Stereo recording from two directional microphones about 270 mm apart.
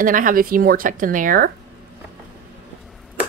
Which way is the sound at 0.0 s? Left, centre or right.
Right.